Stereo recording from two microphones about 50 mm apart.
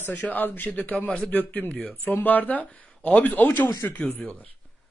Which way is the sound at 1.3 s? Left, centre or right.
Left.